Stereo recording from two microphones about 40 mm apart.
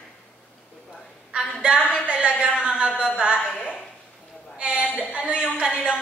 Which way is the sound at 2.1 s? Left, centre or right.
Right.